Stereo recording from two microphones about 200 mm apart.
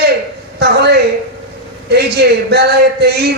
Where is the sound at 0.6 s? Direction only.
55° right (ahead or behind).